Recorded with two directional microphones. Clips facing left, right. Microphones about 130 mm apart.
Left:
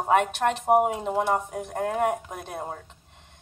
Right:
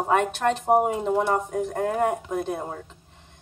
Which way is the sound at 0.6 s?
5° left (ahead or behind).